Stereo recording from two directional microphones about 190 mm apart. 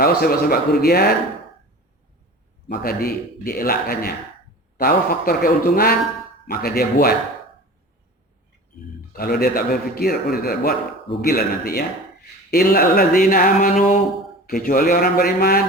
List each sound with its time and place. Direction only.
0.0 s a man's voice: 55° left (ahead or behind)
2.7 s a man's voice: 55° left (ahead or behind)
9.1 s a man's voice: 55° left (ahead or behind)